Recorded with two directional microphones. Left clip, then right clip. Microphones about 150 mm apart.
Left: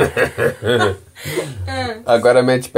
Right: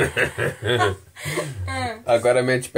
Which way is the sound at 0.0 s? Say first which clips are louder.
Left 5 dB; 5° left (ahead or behind).